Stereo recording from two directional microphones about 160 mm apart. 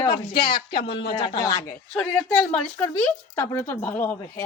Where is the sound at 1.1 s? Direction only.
25° left (ahead or behind).